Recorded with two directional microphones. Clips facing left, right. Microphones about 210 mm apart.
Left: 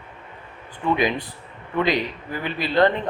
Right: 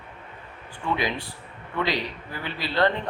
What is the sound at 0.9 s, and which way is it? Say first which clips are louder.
Speech: left 5 dB; 20° left (ahead or behind).